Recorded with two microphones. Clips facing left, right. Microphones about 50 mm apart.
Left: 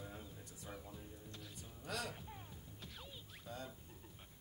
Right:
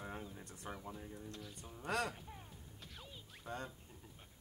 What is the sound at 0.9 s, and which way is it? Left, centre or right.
Speech, right.